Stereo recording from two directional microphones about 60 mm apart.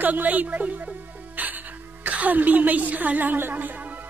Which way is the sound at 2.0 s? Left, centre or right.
Right.